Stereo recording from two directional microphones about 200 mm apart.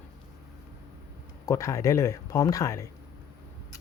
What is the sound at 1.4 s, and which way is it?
Speech, 15° left (ahead or behind).